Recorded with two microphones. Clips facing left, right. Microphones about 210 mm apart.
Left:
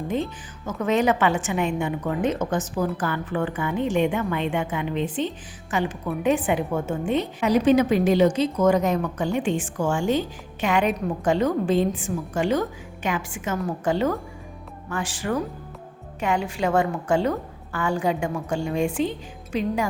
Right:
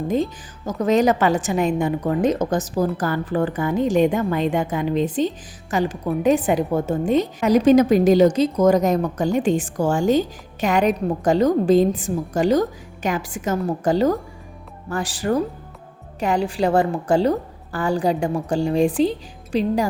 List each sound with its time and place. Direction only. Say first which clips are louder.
0.1 s a woman's voice: right 4 dB; 35° right (ahead or behind)